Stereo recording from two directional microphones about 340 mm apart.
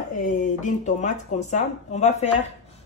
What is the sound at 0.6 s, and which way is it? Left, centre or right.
Speech, left.